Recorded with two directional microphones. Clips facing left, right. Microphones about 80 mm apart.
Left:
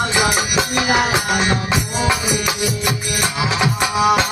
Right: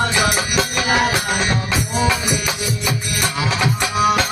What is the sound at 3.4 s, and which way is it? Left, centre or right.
Music, centre.